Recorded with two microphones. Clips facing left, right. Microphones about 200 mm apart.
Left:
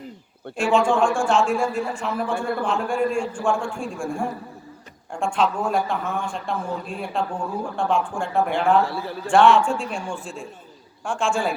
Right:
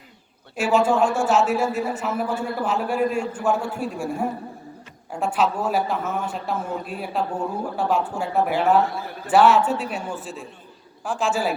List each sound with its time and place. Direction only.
0.5 s a man's voice: 5° right (ahead or behind)
8.8 s a man's voice: 30° left (ahead or behind)
9.3 s a man's voice: 5° right (ahead or behind)